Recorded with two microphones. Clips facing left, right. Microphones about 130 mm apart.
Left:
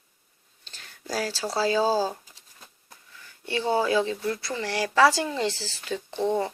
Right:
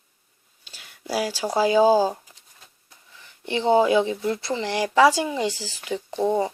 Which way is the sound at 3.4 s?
20° right (ahead or behind).